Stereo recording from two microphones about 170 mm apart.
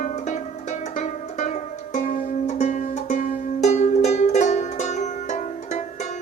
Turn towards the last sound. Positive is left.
turn(degrees=45)  # may be behind; listen again after turning